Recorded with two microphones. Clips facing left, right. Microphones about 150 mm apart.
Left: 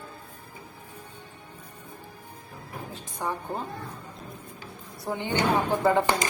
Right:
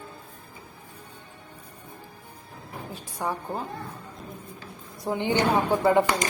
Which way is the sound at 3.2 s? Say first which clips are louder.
Right 1 dB; 10° right (ahead or behind).